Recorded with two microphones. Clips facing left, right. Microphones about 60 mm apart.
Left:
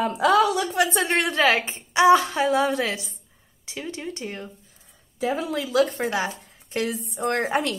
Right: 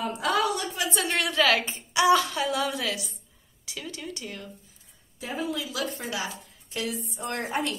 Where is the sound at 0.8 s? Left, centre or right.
Left.